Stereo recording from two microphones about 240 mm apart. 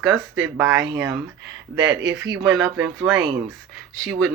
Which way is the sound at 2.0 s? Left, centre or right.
Centre.